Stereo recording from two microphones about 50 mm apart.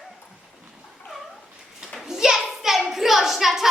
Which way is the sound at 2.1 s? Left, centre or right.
Centre.